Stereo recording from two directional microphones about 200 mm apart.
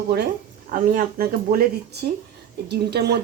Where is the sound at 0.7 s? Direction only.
40° right (ahead or behind).